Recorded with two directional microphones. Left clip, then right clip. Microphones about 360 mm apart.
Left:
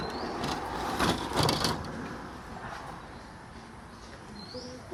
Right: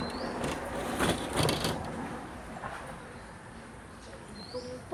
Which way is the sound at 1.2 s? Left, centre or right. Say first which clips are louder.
Left 2 dB; centre.